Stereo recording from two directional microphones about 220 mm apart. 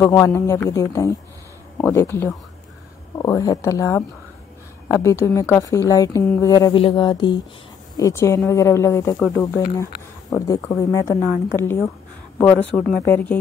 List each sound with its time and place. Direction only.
0.0 s a woman's voice: 10° left (ahead or behind)